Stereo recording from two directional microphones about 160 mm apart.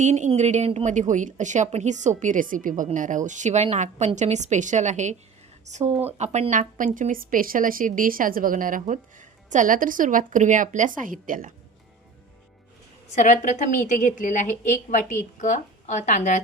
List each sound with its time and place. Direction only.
0.0 s a woman's voice: 45° right (ahead or behind)
13.1 s a woman's voice: 45° left (ahead or behind)